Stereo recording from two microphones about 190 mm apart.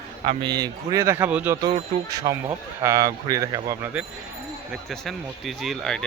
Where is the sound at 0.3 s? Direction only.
20° right (ahead or behind).